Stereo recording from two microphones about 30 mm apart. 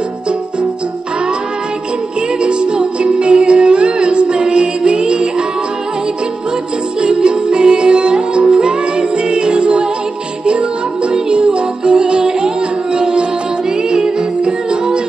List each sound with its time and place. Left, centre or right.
2.4 s music: right
7.0 s music: right